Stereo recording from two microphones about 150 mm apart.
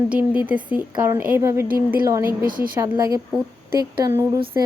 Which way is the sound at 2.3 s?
70° right (ahead or behind).